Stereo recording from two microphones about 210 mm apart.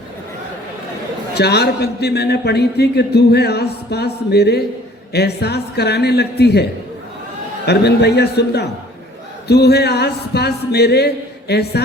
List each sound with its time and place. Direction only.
1.3 s a man's voice: 50° left (ahead or behind)